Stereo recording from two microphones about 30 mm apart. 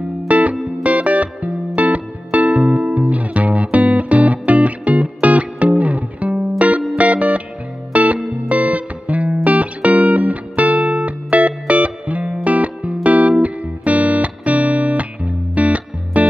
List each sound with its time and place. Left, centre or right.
0.3 s music: right